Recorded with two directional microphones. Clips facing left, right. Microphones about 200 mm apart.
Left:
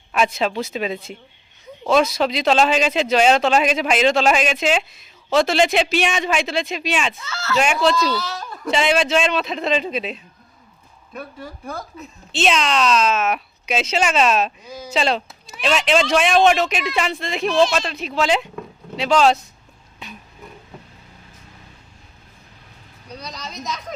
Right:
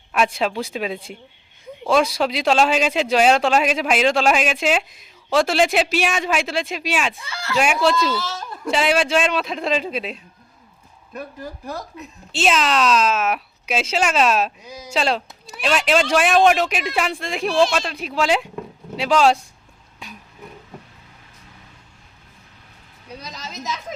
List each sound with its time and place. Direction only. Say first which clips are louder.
0.3 s speech: left 1 dB; 10° right (ahead or behind)
23.2 s speech: left 1 dB; 5° right (ahead or behind)